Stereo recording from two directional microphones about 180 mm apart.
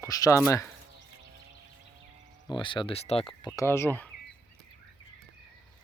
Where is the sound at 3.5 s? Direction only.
15° left (ahead or behind).